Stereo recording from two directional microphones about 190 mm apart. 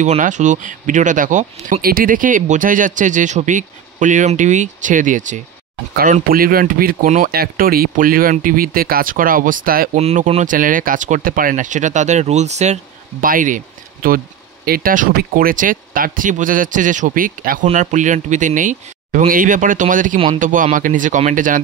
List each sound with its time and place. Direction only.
0.0 s speech: 40° right (ahead or behind)
9.9 s speech: 35° right (ahead or behind)